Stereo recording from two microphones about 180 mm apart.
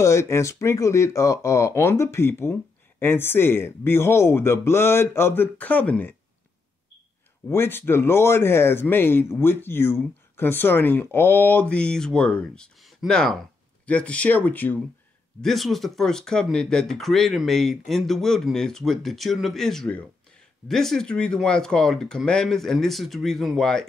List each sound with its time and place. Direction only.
0.0 s a man's voice: 15° left (ahead or behind)
7.4 s a man's voice: 10° left (ahead or behind)